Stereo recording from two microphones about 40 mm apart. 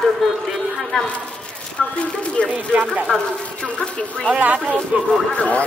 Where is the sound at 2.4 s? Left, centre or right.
Left.